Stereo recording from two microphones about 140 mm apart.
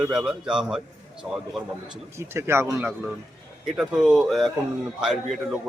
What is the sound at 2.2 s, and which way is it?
Speech, 20° right (ahead or behind).